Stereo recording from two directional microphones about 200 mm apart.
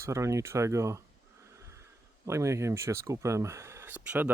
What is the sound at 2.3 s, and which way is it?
Speech, 15° right (ahead or behind).